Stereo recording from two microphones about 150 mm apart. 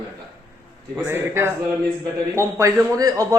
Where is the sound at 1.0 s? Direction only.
15° right (ahead or behind).